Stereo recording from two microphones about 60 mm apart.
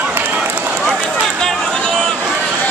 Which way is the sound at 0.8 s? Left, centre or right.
Centre.